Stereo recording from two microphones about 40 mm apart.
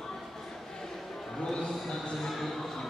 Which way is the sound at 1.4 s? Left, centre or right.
Centre.